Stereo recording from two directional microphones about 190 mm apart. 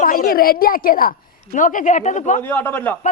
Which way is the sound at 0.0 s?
50° left (ahead or behind).